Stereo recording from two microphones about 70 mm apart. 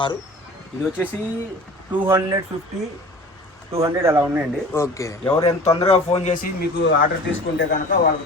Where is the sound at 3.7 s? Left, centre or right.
Right.